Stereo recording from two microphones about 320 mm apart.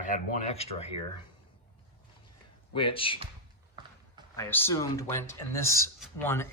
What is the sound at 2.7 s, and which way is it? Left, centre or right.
Speech, centre.